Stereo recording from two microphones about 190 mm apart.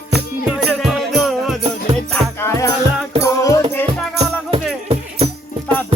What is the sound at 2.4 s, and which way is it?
Music, 15° left (ahead or behind).